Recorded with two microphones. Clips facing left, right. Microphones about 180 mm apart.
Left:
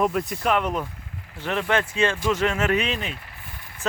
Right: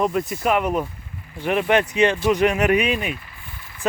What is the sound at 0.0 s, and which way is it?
Speech, centre (ahead or behind).